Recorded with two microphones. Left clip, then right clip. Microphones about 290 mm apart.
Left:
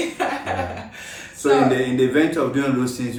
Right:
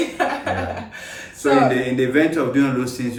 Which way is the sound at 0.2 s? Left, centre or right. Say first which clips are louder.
Right 3 dB; centre.